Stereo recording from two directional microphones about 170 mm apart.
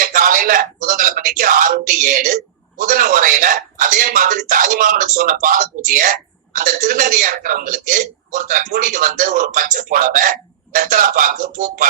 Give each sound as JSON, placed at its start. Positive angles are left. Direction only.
{"t": 0.0, "sound": "a man's voice", "side_deg": -50}